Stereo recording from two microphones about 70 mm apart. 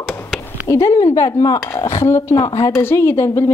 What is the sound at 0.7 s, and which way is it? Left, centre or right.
Speech, left.